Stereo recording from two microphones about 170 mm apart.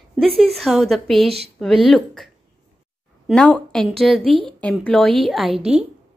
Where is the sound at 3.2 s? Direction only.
5° left (ahead or behind).